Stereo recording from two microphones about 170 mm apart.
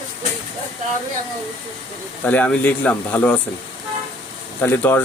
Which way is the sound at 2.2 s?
10° left (ahead or behind).